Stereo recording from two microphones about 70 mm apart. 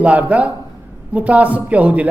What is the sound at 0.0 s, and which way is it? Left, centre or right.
A woman's voice, right.